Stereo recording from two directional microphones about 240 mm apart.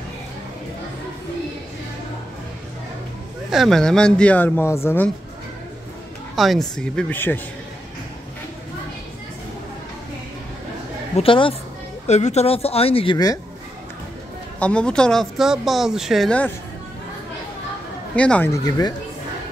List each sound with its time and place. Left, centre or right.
3.4 s speech: centre
6.3 s speech: centre
11.1 s speech: left
14.6 s speech: centre
18.1 s speech: centre